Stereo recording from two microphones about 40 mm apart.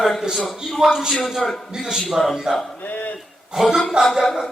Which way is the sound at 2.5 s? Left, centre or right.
Centre.